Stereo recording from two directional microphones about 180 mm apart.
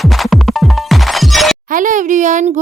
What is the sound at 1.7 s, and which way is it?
Speech, 45° right (ahead or behind).